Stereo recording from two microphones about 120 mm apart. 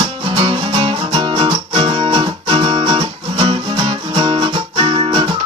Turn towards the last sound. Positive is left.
turn(degrees=-45)  # may be behind; listen again after turning